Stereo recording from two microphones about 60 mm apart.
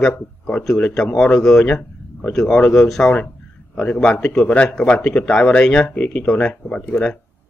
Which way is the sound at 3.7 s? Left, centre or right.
Left.